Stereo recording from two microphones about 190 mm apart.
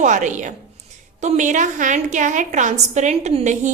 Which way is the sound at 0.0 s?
40° right (ahead or behind).